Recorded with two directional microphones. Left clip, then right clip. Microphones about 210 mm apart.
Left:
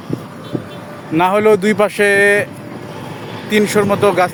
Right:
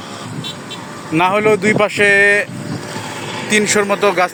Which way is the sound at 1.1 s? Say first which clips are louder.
Left 1 dB; 15° left (ahead or behind).